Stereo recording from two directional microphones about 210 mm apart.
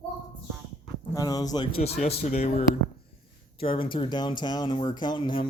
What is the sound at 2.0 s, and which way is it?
Speech, 30° left (ahead or behind).